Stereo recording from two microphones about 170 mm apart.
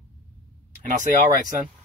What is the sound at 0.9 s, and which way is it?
Speech, 50° right (ahead or behind).